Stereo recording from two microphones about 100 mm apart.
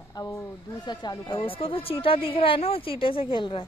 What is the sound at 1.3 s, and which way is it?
A woman's voice, 65° left (ahead or behind).